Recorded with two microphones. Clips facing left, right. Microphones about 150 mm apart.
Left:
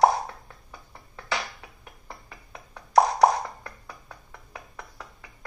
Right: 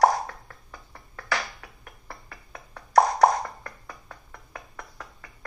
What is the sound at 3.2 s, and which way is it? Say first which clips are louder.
Beatboxing: even; 10° left (ahead or behind).